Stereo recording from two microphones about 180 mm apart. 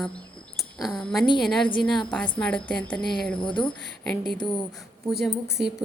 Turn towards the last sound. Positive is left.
turn(degrees=-5)  # may be behind; listen again after turning